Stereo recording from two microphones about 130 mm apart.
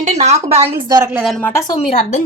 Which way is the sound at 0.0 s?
60° right (ahead or behind).